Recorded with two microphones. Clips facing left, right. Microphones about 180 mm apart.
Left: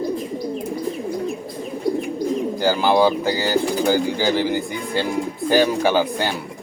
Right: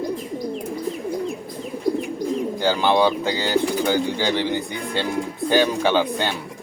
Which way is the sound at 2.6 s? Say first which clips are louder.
Left 2 dB; 10° left (ahead or behind).